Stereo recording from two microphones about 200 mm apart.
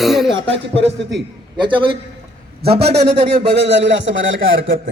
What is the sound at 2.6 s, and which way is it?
Speech, 30° right (ahead or behind).